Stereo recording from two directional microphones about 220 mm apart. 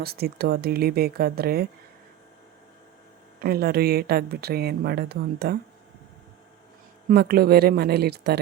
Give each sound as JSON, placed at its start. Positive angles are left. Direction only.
{"t": 0.0, "sound": "a woman's voice", "side_deg": -45}
{"t": 3.4, "sound": "a woman's voice", "side_deg": -45}
{"t": 7.1, "sound": "a woman's voice", "side_deg": -45}